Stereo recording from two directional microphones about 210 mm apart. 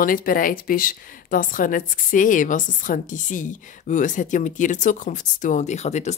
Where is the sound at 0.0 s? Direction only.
40° left (ahead or behind).